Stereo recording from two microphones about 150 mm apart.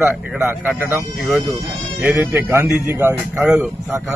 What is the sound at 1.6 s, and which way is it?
Speech, 15° right (ahead or behind).